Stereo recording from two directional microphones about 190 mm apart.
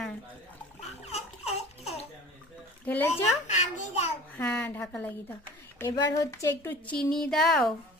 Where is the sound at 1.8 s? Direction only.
35° left (ahead or behind).